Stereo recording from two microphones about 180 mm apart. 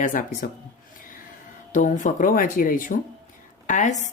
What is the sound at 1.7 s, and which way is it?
Speech, 45° left (ahead or behind).